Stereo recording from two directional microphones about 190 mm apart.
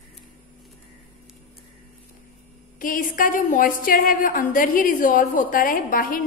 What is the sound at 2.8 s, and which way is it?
A woman's voice, 45° left (ahead or behind).